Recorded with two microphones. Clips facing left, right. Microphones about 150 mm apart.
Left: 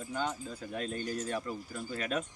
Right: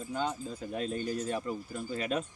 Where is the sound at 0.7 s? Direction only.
5° right (ahead or behind).